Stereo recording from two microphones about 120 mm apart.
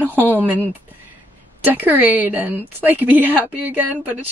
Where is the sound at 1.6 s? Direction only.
15° right (ahead or behind).